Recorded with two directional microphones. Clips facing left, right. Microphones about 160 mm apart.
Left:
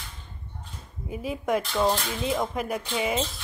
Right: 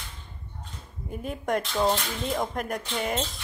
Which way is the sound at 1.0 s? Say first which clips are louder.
Left 2 dB; 5° left (ahead or behind).